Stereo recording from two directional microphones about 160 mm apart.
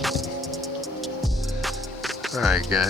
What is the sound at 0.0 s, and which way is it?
Music, centre (ahead or behind).